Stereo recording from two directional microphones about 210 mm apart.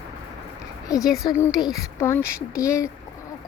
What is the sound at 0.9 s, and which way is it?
A woman's voice, 15° left (ahead or behind).